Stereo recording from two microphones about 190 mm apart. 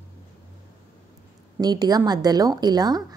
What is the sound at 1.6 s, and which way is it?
A woman's voice, 20° right (ahead or behind).